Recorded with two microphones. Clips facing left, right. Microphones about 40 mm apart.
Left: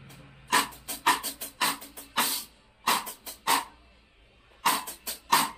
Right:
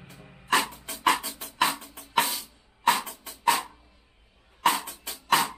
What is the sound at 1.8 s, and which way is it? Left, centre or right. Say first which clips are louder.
Drum: right 7 dB; right.